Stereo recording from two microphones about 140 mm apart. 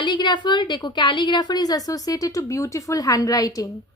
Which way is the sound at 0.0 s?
30° left (ahead or behind).